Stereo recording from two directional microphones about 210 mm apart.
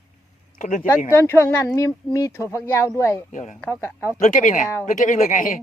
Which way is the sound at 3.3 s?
35° left (ahead or behind).